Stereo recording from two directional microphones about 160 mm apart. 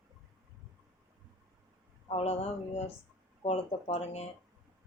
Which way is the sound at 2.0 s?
40° left (ahead or behind).